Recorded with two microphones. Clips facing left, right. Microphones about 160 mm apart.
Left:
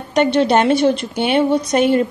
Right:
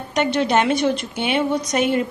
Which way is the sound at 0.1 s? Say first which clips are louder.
Left 5 dB; 30° left (ahead or behind).